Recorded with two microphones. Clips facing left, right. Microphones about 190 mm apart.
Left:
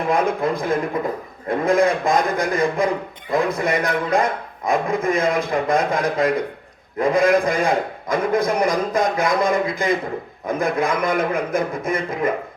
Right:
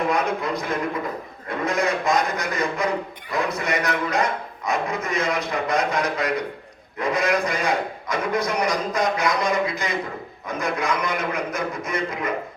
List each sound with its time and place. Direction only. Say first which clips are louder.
0.1 s a man's voice: left 4 dB; 50° left (ahead or behind)